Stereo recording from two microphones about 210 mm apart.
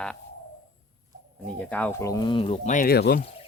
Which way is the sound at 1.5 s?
5° left (ahead or behind).